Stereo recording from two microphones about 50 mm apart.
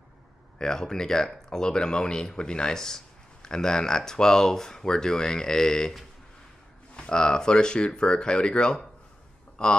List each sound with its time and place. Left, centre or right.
0.6 s speech: centre
7.0 s speech: centre